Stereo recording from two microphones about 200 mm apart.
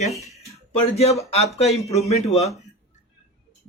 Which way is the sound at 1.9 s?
35° left (ahead or behind).